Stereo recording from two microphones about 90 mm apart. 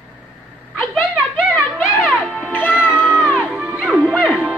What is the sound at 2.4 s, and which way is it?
Music, 20° left (ahead or behind).